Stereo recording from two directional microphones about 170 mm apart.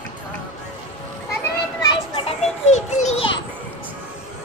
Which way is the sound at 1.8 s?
30° left (ahead or behind).